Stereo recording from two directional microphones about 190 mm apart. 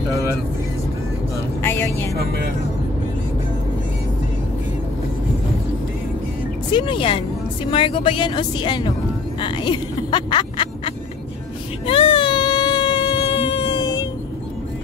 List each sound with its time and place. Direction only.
1.6 s vehicle: 10° left (ahead or behind)
2.1 s speech: 55° right (ahead or behind)
6.7 s speech: 25° left (ahead or behind)
11.8 s a sound: 25° left (ahead or behind)